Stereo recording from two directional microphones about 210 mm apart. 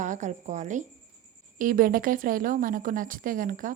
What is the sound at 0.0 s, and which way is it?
A woman's voice, 35° right (ahead or behind).